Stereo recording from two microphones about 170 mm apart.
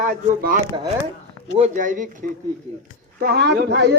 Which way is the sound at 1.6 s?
50° right (ahead or behind).